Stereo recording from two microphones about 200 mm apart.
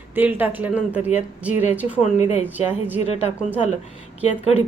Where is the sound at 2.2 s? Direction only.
35° left (ahead or behind).